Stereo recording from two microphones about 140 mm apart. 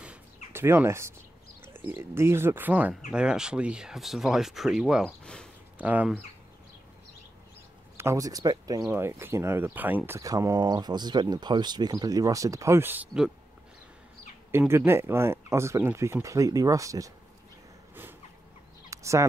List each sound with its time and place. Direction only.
0.0 s a sound: 15° right (ahead or behind)
1.7 s speech: 15° right (ahead or behind)
5.2 s speech: 5° left (ahead or behind)
5.8 s speech: 10° right (ahead or behind)
8.0 s speech: 20° right (ahead or behind); by 13.3 s 5° right (ahead or behind)
14.7 s speech: 15° right (ahead or behind)
18.9 s fowl: 20° right (ahead or behind)